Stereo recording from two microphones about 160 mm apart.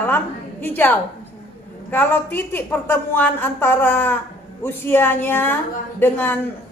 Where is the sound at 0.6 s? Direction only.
10° left (ahead or behind).